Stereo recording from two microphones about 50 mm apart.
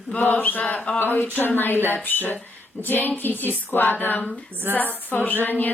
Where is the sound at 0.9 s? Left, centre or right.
Left.